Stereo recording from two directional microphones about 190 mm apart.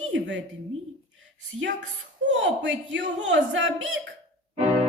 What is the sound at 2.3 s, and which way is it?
Speech, 70° right (ahead or behind).